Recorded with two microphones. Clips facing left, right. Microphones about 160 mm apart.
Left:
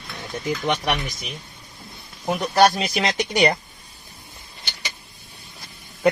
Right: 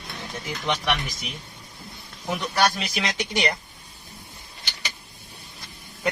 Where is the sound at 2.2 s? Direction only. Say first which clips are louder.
Left 6 dB; 35° left (ahead or behind).